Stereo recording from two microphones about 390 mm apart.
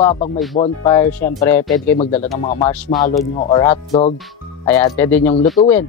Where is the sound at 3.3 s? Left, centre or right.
Centre.